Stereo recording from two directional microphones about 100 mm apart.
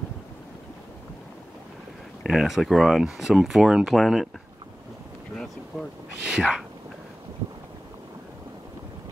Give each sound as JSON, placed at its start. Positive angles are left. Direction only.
{"t": 2.2, "sound": "speech", "side_deg": -5}
{"t": 5.3, "sound": "boat", "side_deg": 5}
{"t": 6.3, "sound": "speech", "side_deg": -5}